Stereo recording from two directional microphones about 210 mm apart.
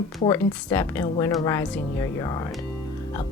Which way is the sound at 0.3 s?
10° left (ahead or behind).